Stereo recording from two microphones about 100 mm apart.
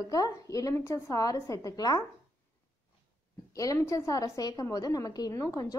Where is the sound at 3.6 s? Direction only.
35° left (ahead or behind).